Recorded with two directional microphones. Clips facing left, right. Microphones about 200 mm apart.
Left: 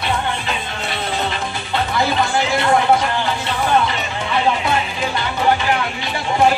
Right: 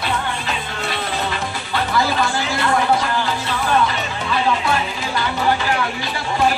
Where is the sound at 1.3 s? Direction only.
25° left (ahead or behind).